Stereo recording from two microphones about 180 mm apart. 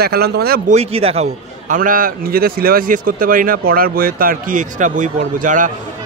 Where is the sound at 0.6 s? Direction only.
35° right (ahead or behind).